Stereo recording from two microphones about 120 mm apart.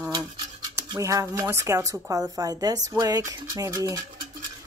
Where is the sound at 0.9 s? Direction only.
25° right (ahead or behind).